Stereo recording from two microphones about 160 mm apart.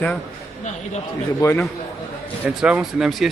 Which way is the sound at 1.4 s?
15° left (ahead or behind).